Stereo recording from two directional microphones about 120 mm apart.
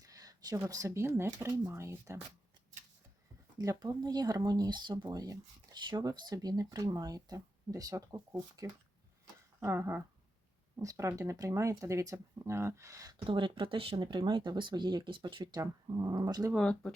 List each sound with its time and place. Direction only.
0.0 s speech: 30° right (ahead or behind)
3.6 s speech: 30° right (ahead or behind)
13.2 s speech: 45° right (ahead or behind)
15.6 s speech: 30° right (ahead or behind)
16.6 s speech: 5° left (ahead or behind)